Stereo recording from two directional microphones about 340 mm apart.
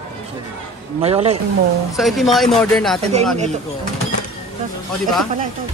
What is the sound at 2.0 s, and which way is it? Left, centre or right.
Speech, centre.